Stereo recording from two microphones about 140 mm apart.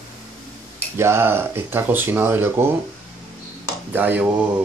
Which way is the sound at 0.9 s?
20° right (ahead or behind).